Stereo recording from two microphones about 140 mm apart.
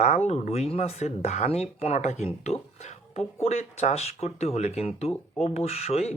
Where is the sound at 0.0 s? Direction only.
50° left (ahead or behind).